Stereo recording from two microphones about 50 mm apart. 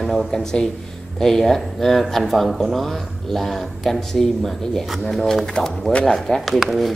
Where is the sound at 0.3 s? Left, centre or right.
Centre.